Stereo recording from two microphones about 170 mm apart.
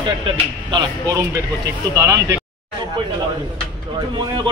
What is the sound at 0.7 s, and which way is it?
A man's voice, 20° right (ahead or behind).